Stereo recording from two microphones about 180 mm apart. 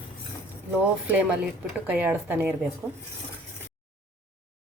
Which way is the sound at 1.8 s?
10° right (ahead or behind).